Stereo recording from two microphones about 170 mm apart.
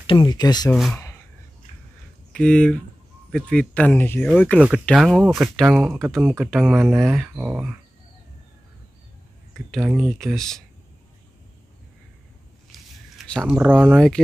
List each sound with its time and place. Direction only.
0.0 s speech: 30° left (ahead or behind)
2.3 s speech: 5° left (ahead or behind); by 6.5 s 10° right (ahead or behind)
6.5 s speech: centre (ahead or behind)
9.7 s speech: 5° right (ahead or behind)
12.7 s a sound: centre (ahead or behind)
13.6 s speech: 10° right (ahead or behind)
13.9 s speech: 5° left (ahead or behind)